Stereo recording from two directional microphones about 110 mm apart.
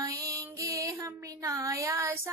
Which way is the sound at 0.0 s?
35° right (ahead or behind).